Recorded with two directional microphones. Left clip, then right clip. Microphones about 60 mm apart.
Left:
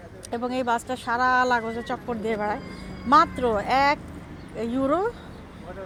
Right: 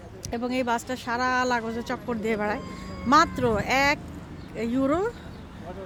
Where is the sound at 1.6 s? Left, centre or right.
Right.